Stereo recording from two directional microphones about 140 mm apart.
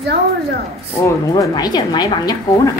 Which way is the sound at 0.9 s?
20° left (ahead or behind).